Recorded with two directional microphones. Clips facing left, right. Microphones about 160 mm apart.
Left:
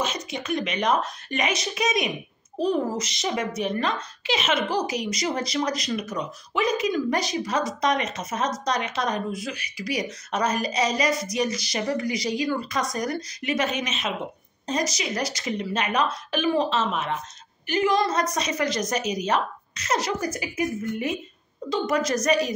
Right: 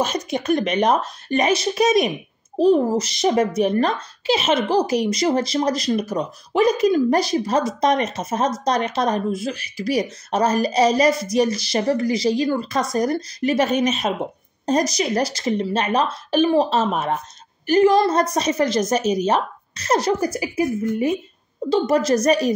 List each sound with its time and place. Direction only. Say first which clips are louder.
0.0 s a woman's voice: right 7 dB; 40° right (ahead or behind)